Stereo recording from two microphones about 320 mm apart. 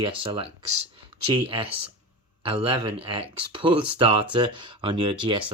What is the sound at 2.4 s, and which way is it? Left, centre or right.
Speech, centre.